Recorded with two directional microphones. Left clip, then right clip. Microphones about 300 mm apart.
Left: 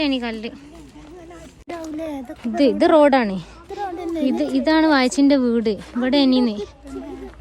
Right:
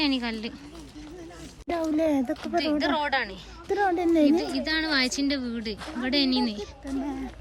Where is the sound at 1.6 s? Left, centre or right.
Right.